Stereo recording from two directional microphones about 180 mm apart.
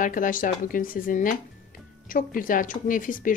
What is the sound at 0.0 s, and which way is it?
Speech, 50° left (ahead or behind).